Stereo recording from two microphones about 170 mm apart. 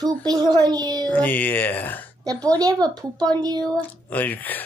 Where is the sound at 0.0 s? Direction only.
25° right (ahead or behind).